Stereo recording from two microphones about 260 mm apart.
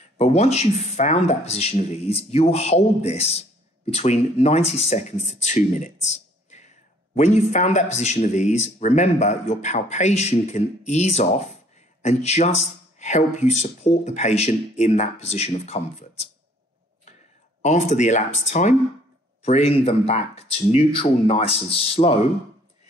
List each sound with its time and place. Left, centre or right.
0.2 s speech: left
17.6 s speech: left